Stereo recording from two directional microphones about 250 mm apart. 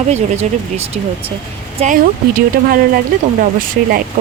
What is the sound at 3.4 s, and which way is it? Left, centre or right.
Speech, right.